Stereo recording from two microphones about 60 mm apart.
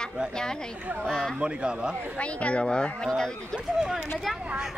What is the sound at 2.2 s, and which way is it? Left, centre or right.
Speech, centre.